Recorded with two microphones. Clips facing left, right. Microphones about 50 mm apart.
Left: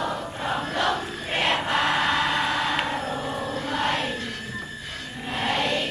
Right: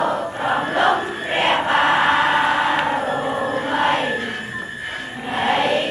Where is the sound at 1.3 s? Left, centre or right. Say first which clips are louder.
Right 6 dB; right.